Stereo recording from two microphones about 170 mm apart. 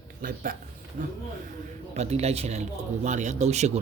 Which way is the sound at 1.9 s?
40° right (ahead or behind).